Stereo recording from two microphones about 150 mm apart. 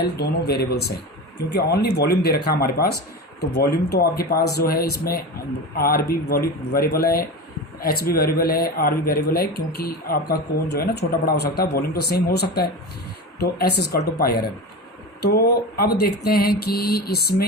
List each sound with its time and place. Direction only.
0.0 s speech: 90° left